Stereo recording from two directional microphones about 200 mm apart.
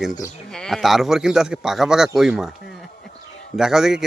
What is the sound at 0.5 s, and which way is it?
A man's voice, centre (ahead or behind).